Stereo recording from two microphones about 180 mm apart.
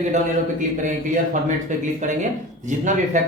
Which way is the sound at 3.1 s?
40° right (ahead or behind).